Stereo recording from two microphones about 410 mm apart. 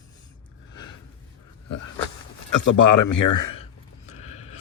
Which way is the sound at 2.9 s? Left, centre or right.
Left.